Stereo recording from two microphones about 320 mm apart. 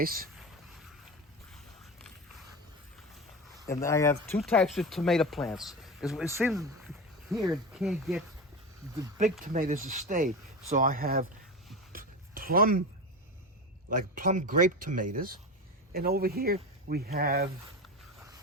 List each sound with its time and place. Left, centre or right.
0.0 s speech: right
3.7 s speech: centre
9.4 s speech: right
11.9 s a sound: right
14.2 s speech: right